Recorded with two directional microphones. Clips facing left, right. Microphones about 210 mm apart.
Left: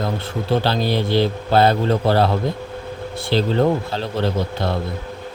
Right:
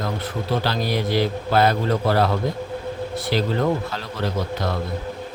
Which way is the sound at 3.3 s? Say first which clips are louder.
Left 4 dB; 30° left (ahead or behind).